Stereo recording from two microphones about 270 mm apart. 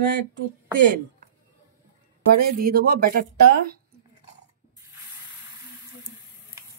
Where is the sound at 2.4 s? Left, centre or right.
Right.